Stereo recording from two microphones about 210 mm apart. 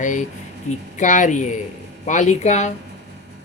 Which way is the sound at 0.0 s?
35° left (ahead or behind).